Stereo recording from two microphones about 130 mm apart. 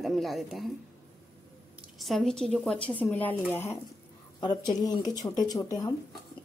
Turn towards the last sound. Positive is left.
turn(degrees=30)  # may be behind; listen again after turning